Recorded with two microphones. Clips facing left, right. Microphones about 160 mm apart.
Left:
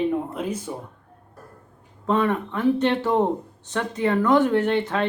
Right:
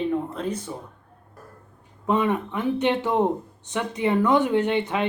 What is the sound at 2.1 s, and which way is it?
Speech, 15° right (ahead or behind).